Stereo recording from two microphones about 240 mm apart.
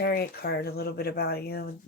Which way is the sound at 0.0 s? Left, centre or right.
Left.